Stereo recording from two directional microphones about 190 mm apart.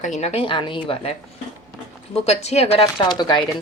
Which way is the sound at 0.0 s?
35° left (ahead or behind).